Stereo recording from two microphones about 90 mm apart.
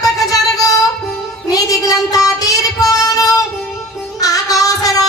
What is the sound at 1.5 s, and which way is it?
Child singing, 40° left (ahead or behind).